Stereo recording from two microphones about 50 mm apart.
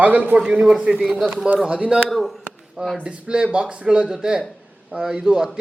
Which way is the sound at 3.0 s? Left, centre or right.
Centre.